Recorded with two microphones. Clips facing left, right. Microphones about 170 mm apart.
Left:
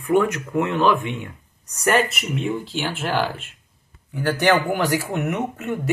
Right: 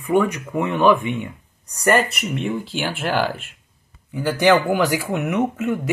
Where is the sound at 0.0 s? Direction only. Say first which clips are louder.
Even; 10° right (ahead or behind).